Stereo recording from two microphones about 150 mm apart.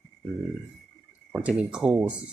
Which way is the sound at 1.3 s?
5° right (ahead or behind).